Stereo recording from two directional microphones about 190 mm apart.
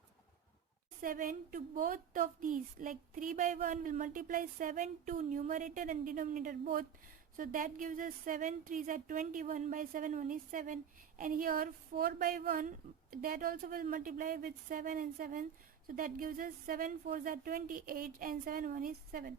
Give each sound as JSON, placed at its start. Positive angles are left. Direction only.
{"t": 1.0, "sound": "a woman's voice", "side_deg": -45}